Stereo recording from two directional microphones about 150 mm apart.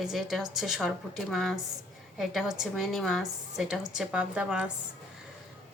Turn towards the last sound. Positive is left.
turn(degrees=-5)  # may be behind; listen again after turning